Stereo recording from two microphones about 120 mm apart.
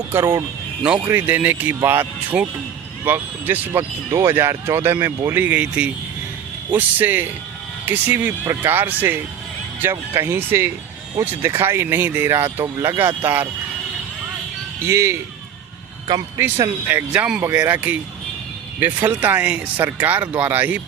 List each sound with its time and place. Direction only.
0.1 s speech: 20° right (ahead or behind)
14.8 s speech: 25° right (ahead or behind)
16.4 s speech: 15° right (ahead or behind)